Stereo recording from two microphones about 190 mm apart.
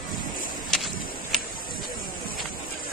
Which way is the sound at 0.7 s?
Centre (ahead or behind).